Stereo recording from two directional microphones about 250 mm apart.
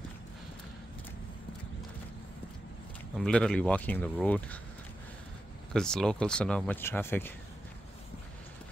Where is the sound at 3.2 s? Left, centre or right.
Centre.